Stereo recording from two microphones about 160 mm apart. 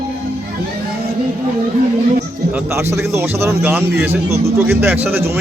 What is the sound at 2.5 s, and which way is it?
Speech, 15° right (ahead or behind).